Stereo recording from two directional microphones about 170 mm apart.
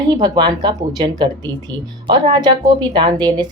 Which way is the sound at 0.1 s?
25° right (ahead or behind).